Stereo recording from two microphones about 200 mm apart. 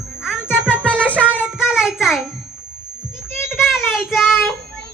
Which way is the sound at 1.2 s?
10° left (ahead or behind).